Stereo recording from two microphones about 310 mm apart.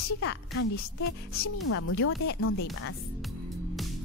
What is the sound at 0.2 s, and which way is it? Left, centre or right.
A woman's voice, left.